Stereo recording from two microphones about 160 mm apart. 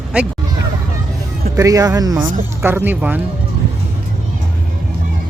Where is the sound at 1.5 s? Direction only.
20° right (ahead or behind).